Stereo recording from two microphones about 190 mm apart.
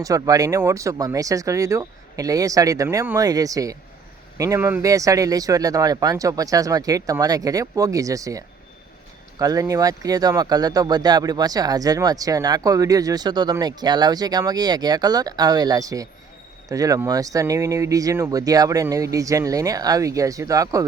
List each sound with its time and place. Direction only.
0.0 s speech: 20° right (ahead or behind)